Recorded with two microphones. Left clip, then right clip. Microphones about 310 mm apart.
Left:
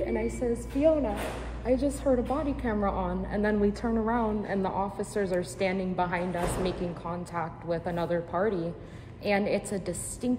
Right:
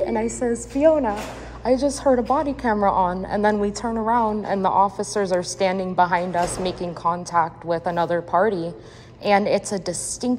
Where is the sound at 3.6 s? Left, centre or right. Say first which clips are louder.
Right 4 dB; centre.